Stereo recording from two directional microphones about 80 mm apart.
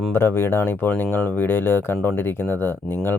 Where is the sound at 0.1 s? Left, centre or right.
Left.